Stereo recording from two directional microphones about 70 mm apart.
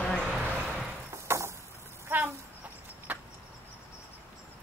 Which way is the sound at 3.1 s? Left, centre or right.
Right.